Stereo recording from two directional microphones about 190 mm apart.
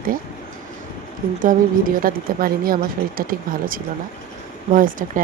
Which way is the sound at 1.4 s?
45° right (ahead or behind).